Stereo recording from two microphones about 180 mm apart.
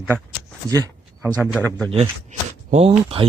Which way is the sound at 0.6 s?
20° right (ahead or behind).